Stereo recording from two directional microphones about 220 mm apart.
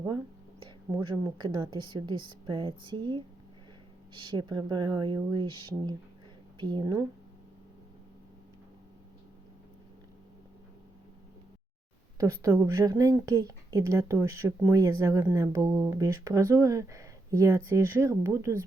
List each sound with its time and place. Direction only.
0.6 s a woman's voice: 20° right (ahead or behind)
12.1 s speech: 15° right (ahead or behind)